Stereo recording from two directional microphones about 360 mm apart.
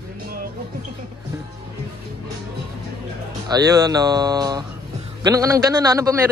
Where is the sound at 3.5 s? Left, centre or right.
Centre.